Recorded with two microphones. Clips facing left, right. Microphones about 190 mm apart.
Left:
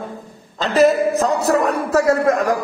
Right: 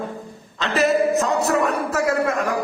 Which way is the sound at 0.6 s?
40° left (ahead or behind).